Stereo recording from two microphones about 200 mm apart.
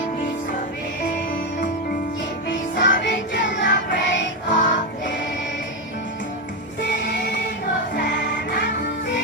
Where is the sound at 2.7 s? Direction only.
60° left (ahead or behind).